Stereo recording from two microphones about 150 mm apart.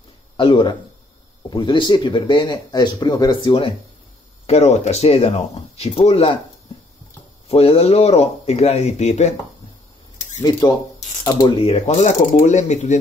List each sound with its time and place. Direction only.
0.4 s speech: 35° left (ahead or behind)
4.5 s speech: 45° left (ahead or behind)
7.4 s speech: 40° left (ahead or behind)
10.6 s speech: 20° left (ahead or behind)
11.2 s speech: 35° left (ahead or behind)